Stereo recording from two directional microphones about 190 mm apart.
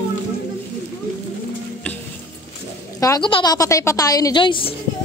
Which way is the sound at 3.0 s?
20° left (ahead or behind).